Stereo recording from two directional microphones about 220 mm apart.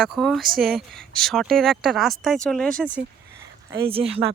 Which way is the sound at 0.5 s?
40° right (ahead or behind).